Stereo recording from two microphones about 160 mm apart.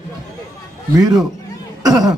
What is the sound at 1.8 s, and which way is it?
Cough, 25° right (ahead or behind).